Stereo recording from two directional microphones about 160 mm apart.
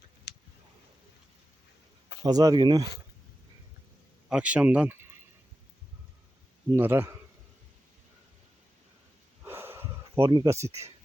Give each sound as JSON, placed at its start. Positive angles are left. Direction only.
{"t": 0.3, "sound": "clicking", "side_deg": 90}
{"t": 2.2, "sound": "speech", "side_deg": -25}
{"t": 4.3, "sound": "speech", "side_deg": -5}
{"t": 6.7, "sound": "speech", "side_deg": -15}
{"t": 9.4, "sound": "a sound", "side_deg": -15}